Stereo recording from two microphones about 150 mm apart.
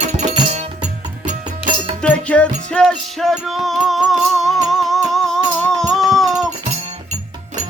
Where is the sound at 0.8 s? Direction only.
55° right (ahead or behind).